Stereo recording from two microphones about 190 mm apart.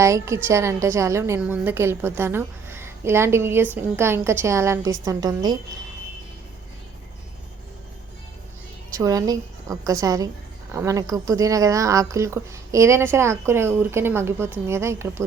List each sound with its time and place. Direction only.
0.0 s a woman's voice: 15° right (ahead or behind)
9.0 s a woman's voice: 20° right (ahead or behind)